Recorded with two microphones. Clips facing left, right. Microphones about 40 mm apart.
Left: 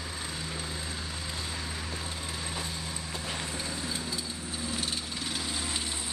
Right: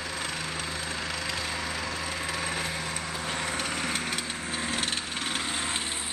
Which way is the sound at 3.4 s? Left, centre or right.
Right.